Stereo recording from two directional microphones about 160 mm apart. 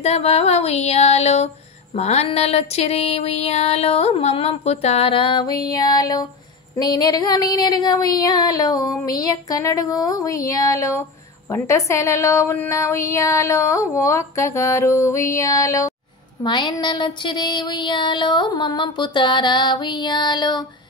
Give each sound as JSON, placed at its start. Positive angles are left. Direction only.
{"t": 0.0, "sound": "a sound", "side_deg": 40}
{"t": 6.8, "sound": "speech", "side_deg": 25}
{"t": 16.4, "sound": "speech", "side_deg": 30}